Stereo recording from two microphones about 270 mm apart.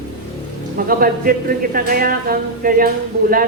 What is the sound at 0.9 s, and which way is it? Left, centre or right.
A man's voice, right.